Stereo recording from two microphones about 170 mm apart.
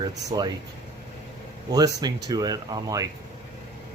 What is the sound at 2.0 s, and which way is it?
Speech, 25° right (ahead or behind).